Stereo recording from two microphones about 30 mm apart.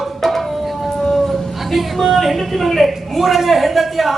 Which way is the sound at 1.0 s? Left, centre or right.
Centre.